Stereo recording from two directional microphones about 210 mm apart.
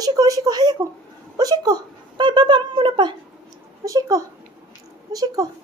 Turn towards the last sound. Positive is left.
turn(degrees=-15)  # may be behind; listen again after turning